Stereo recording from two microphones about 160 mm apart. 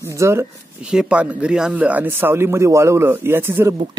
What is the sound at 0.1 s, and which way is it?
Speech, 15° right (ahead or behind).